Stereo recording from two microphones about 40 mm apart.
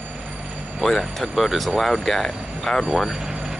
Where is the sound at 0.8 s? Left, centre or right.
Centre.